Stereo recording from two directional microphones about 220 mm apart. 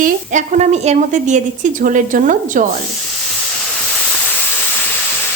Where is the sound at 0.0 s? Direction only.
35° right (ahead or behind).